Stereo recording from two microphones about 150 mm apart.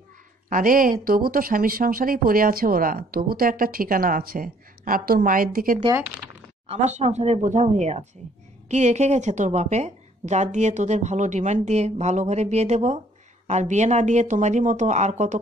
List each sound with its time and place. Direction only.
0.5 s a woman's voice: 65° right (ahead or behind)
6.7 s a woman's voice: 45° right (ahead or behind)